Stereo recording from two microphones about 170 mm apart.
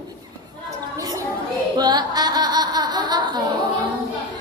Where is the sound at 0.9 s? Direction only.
20° right (ahead or behind).